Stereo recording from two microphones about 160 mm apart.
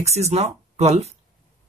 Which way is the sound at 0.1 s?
40° right (ahead or behind).